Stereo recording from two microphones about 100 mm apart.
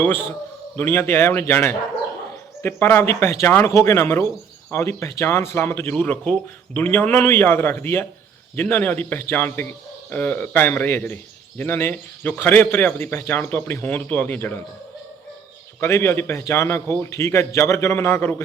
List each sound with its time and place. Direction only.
0.0 s a man's voice: 20° left (ahead or behind)
15.8 s a man's voice: 25° left (ahead or behind)